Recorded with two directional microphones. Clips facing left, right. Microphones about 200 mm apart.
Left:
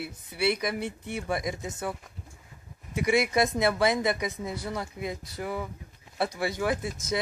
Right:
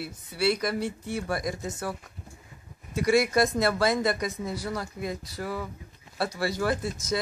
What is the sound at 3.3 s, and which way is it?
Speech, 20° left (ahead or behind).